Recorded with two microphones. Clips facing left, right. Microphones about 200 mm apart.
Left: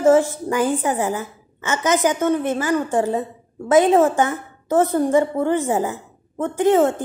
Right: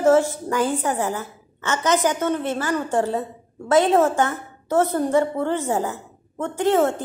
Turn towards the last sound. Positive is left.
turn(degrees=15)  # may be behind; listen again after turning